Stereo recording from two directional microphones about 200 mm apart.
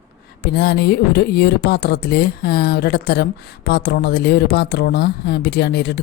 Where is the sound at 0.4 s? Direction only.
55° left (ahead or behind).